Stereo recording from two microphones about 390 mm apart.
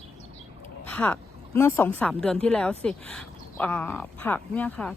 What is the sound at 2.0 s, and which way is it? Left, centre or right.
A woman's voice, centre.